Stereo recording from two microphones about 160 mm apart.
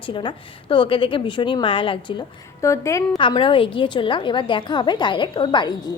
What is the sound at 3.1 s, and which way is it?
A woman's voice, 30° left (ahead or behind).